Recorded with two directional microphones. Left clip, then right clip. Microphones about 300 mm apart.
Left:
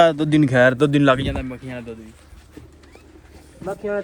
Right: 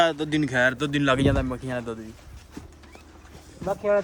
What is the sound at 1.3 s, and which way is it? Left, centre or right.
Speech, centre.